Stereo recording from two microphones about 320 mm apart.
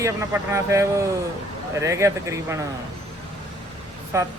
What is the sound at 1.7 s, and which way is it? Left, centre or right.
Speech, centre.